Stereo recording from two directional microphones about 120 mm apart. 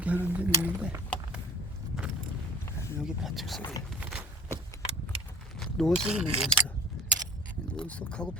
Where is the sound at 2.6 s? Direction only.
20° left (ahead or behind).